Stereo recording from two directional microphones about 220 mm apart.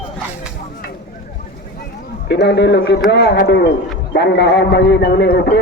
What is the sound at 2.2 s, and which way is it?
A man's voice, 50° left (ahead or behind).